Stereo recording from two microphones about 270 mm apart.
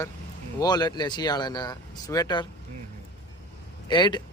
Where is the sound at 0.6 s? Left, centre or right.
Centre.